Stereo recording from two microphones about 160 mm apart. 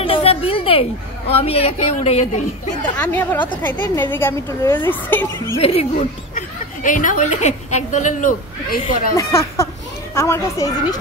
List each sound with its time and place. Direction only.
0.0 s a sound: 35° left (ahead or behind)
1.3 s a woman's voice: 40° left (ahead or behind)
2.8 s a woman's voice: 10° left (ahead or behind)
3.4 s speech: 30° left (ahead or behind)
4.1 s a woman's voice: 15° left (ahead or behind)
5.6 s a woman's voice: 40° left (ahead or behind)
5.9 s speech: 55° left (ahead or behind)
9.1 s a woman's voice: 20° left (ahead or behind)